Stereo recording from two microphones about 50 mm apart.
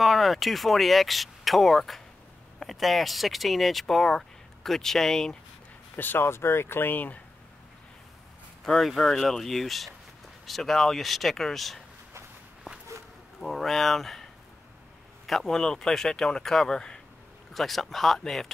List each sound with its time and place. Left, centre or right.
0.0 s speech: centre
5.9 s speech: left
8.8 s speech: centre
13.4 s speech: centre
17.6 s speech: centre